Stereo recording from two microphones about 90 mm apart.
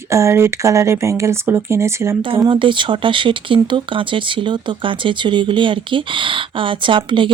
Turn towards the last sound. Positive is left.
turn(degrees=-65)  # may be behind; listen again after turning